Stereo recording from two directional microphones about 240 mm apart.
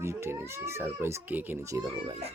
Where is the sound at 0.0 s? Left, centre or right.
Centre.